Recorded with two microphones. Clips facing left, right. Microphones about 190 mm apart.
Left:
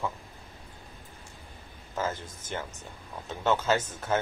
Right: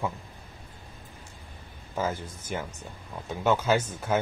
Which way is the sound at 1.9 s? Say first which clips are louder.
Right 2 dB; 10° right (ahead or behind).